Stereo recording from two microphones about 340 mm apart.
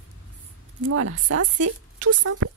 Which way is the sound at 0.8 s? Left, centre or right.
Right.